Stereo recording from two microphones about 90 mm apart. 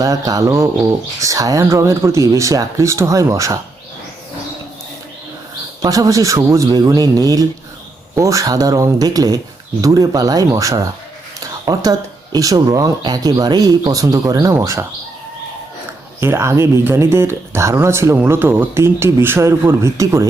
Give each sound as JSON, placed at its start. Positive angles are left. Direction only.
{"t": 0.0, "sound": "a man's voice", "side_deg": -40}
{"t": 5.8, "sound": "a man's voice", "side_deg": -40}
{"t": 13.0, "sound": "speech", "side_deg": -55}
{"t": 14.5, "sound": "speech", "side_deg": -30}
{"t": 16.2, "sound": "speech", "side_deg": -30}